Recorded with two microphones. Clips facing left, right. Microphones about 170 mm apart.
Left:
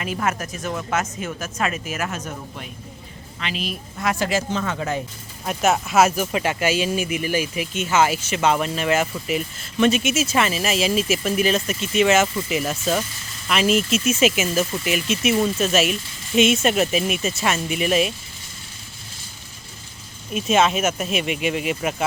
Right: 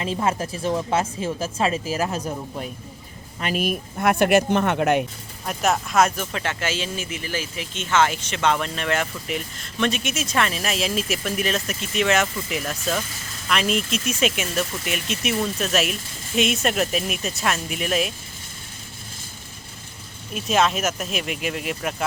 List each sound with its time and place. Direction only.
0.0 s speech: 30° right (ahead or behind)
3.4 s speech: 50° right (ahead or behind); by 5.0 s 65° right (ahead or behind)
5.5 s speech: 5° left (ahead or behind)
20.3 s speech: centre (ahead or behind)